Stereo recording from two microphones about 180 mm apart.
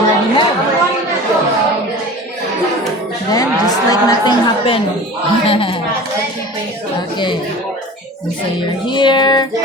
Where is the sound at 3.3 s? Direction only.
20° left (ahead or behind).